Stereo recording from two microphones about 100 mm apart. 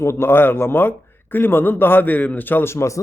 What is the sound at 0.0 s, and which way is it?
Speech, 25° left (ahead or behind).